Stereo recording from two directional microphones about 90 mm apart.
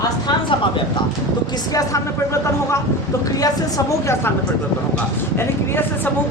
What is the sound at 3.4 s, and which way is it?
Speech, 40° left (ahead or behind).